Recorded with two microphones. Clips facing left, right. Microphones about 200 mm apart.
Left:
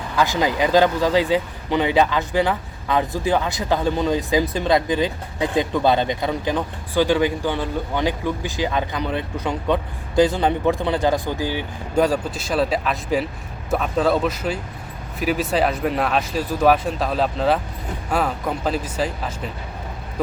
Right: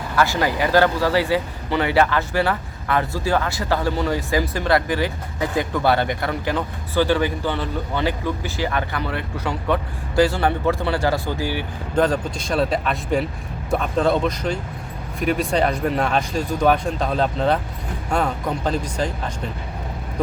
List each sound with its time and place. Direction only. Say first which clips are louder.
0.2 s speech: left 1 dB; 15° left (ahead or behind)